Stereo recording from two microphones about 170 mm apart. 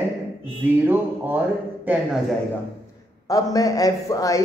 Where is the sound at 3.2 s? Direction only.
20° left (ahead or behind).